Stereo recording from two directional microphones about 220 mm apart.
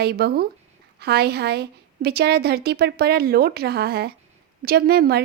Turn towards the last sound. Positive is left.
turn(degrees=-45)  # may be behind; listen again after turning